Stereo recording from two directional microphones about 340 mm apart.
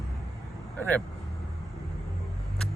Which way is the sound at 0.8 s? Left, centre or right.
Centre.